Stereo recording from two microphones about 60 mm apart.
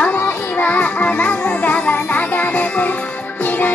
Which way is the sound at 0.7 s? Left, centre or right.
Left.